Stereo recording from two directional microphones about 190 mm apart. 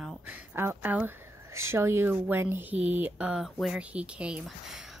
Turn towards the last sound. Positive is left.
turn(degrees=-5)  # may be behind; listen again after turning